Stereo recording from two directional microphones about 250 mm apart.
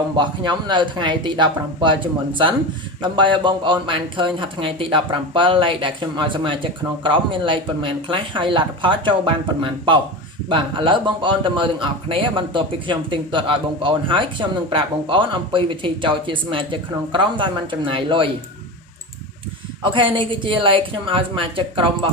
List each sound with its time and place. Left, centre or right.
0.2 s a man's voice: centre
19.8 s a man's voice: centre